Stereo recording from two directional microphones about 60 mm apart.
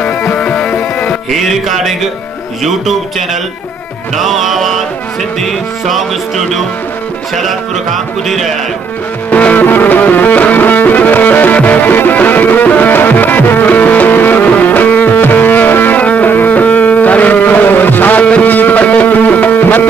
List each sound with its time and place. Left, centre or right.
0.0 s music: left
1.3 s music: centre
9.3 s music: left
18.2 s music: centre